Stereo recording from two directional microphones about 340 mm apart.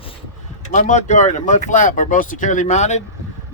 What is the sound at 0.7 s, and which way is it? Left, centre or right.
Speech, left.